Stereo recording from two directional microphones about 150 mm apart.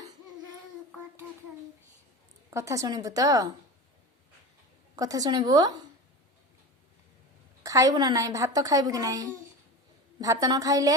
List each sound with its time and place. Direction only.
2.5 s a woman's voice: 20° right (ahead or behind)
4.9 s a woman's voice: 25° right (ahead or behind)
7.6 s a woman's voice: 20° right (ahead or behind)